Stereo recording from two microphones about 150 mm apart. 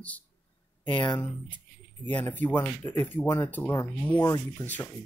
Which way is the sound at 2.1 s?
10° left (ahead or behind).